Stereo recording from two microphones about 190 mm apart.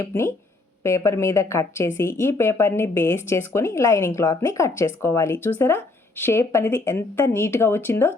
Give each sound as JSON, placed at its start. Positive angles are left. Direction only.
{"t": 0.0, "sound": "a woman's voice", "side_deg": 15}